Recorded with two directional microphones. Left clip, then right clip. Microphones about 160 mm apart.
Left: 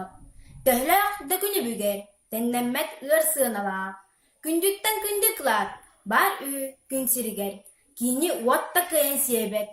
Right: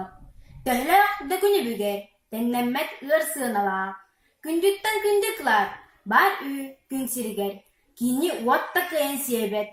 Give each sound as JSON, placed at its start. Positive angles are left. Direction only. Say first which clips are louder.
{"t": 0.6, "sound": "a woman's voice", "louder": "right 2 dB", "side_deg": 40}